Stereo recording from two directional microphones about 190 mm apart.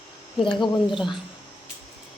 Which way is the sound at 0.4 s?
25° left (ahead or behind).